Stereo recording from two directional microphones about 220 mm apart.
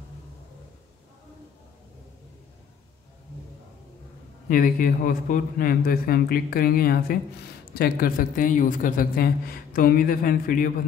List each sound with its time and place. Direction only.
4.5 s a man's voice: 40° left (ahead or behind)